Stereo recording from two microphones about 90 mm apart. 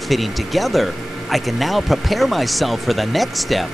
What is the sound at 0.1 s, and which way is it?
Speech, centre (ahead or behind).